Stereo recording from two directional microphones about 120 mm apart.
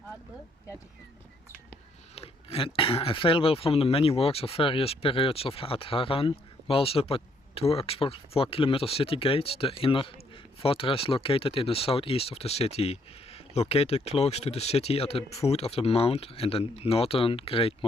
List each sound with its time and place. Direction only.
2.1 s speech: 55° left (ahead or behind)